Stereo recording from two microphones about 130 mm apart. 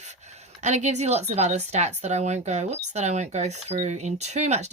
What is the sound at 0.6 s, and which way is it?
Speech, 65° right (ahead or behind).